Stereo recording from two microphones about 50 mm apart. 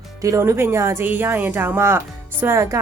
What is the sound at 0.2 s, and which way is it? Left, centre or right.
Speech, right.